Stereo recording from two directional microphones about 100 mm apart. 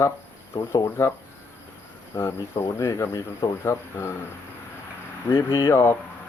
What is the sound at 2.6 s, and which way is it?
Speech, 30° left (ahead or behind).